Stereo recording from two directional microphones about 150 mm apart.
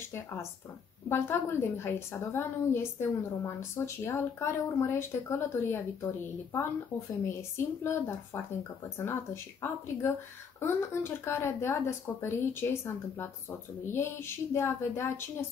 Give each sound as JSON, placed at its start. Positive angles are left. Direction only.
{"t": 0.0, "sound": "a woman's voice", "side_deg": 15}
{"t": 7.2, "sound": "a woman's voice", "side_deg": 15}